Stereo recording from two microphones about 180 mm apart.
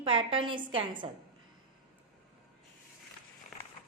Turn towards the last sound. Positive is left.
turn(degrees=0)  # may be behind; listen again after turning